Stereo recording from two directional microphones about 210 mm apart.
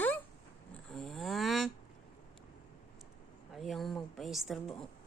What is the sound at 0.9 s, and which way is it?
Snoring, centre (ahead or behind).